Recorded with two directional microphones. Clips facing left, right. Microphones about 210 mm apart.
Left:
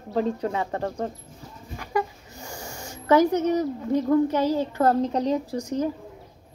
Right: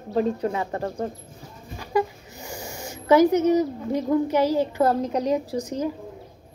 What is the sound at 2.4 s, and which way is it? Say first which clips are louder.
Snort: right 3 dB; 20° right (ahead or behind).